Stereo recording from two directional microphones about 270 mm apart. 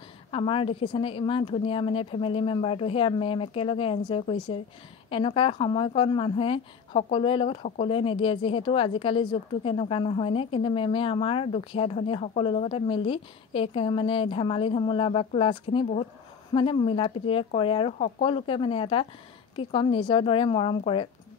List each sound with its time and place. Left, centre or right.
0.3 s a woman's voice: centre